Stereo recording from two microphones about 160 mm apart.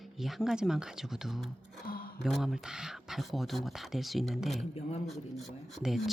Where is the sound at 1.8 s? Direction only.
65° left (ahead or behind).